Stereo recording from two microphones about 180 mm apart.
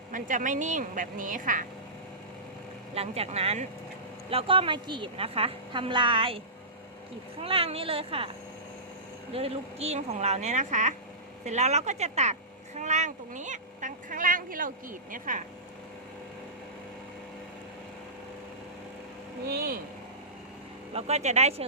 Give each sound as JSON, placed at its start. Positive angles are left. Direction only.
{"t": 0.1, "sound": "a woman's voice", "side_deg": -45}
{"t": 2.9, "sound": "a woman's voice", "side_deg": -35}
{"t": 7.4, "sound": "speech", "side_deg": -30}
{"t": 9.3, "sound": "speech", "side_deg": -35}
{"t": 19.5, "sound": "speech", "side_deg": -55}
{"t": 20.9, "sound": "speech", "side_deg": -40}